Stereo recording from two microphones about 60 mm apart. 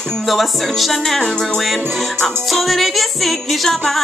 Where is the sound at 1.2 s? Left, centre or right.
Centre.